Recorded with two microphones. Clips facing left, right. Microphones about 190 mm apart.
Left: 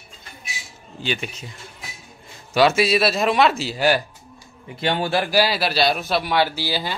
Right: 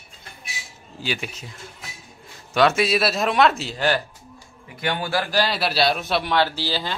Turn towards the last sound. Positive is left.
turn(degrees=10)  # may be behind; listen again after turning